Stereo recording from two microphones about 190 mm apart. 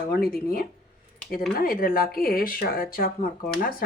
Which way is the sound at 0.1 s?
50° left (ahead or behind).